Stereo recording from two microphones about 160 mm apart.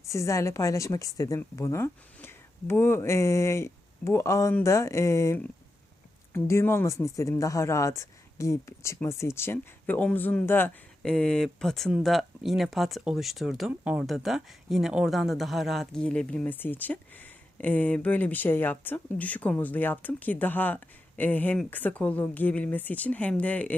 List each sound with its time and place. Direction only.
0.0 s a woman's voice: 20° left (ahead or behind)